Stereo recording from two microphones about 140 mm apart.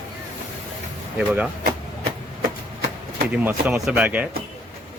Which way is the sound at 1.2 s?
10° right (ahead or behind).